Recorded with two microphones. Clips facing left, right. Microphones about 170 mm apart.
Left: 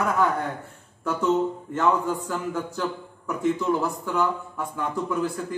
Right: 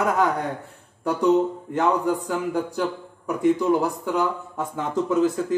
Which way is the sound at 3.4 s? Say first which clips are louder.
Right 4 dB; 15° right (ahead or behind).